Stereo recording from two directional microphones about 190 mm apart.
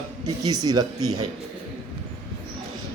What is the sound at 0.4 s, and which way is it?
Speech, 20° right (ahead or behind).